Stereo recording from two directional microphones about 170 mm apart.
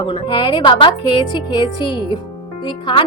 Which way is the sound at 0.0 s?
30° left (ahead or behind).